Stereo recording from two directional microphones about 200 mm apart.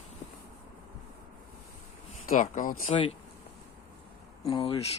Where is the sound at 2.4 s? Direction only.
40° left (ahead or behind).